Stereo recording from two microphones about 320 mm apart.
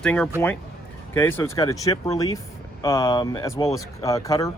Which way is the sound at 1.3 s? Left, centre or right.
Centre.